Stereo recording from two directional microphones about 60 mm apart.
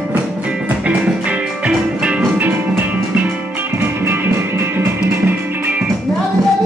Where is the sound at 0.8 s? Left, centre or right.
Right.